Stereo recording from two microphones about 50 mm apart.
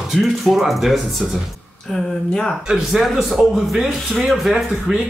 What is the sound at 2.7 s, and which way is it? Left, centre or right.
Speech, centre.